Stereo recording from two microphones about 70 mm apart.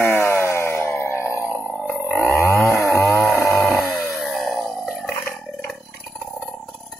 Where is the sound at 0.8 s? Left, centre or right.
Left.